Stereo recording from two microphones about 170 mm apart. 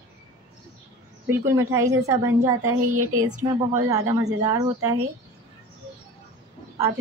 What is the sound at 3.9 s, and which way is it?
Speech, 20° right (ahead or behind).